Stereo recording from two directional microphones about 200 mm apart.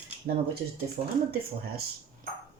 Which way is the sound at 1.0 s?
30° right (ahead or behind).